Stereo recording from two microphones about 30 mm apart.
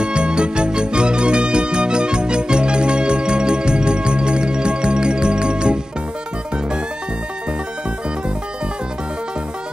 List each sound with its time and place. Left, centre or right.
0.0 s music: right